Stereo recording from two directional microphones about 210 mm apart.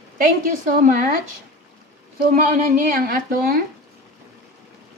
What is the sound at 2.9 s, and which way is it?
Speech, 40° right (ahead or behind).